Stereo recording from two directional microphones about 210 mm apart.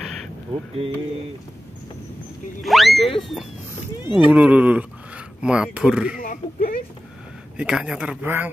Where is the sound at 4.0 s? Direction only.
20° left (ahead or behind).